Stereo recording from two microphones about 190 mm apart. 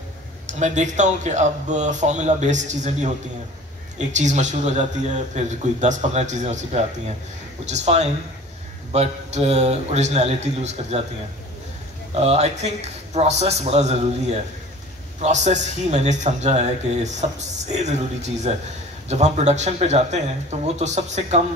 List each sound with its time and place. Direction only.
0.5 s a man's voice: 40° right (ahead or behind)
12.1 s a man's voice: 35° right (ahead or behind)